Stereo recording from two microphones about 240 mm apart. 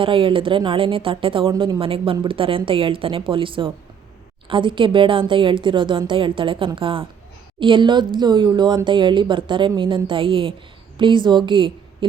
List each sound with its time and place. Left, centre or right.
0.0 s a woman's voice: right